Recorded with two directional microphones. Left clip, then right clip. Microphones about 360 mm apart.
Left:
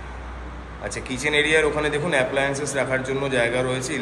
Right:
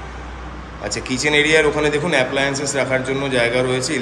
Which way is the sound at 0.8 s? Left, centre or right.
Centre.